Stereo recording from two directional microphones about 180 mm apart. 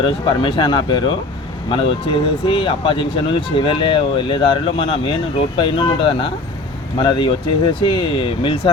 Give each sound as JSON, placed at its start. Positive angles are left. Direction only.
{"t": 0.0, "sound": "speech", "side_deg": 25}